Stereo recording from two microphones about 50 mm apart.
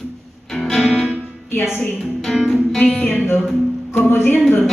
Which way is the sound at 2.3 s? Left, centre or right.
Centre.